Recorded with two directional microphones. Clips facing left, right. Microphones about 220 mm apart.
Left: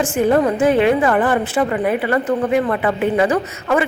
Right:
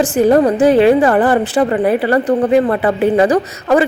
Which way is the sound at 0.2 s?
40° right (ahead or behind).